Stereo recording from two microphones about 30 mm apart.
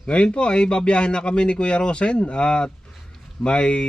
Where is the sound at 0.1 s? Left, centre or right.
Left.